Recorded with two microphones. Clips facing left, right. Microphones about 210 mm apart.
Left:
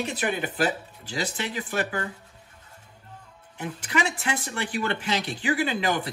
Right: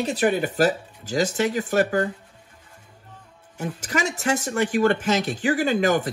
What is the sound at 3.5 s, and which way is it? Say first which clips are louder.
Speech: right 1 dB; 40° right (ahead or behind).